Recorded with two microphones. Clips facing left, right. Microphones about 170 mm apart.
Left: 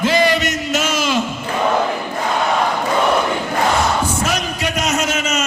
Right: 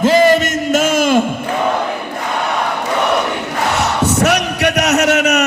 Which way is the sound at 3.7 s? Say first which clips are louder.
Right 2 dB; 75° right (ahead or behind).